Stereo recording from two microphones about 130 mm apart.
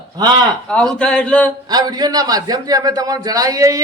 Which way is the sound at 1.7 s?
30° right (ahead or behind).